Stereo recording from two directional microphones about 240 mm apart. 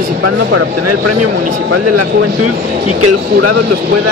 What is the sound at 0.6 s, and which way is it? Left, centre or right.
Speech, right.